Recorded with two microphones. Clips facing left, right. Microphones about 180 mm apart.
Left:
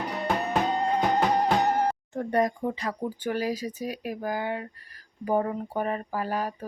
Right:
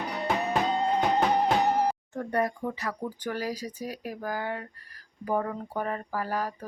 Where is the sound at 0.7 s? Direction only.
Centre (ahead or behind).